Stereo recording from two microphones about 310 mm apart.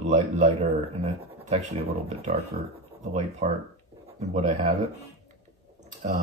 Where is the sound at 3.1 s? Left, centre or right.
Right.